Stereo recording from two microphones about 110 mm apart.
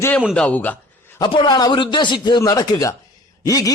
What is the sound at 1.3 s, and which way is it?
A man's voice, 45° left (ahead or behind).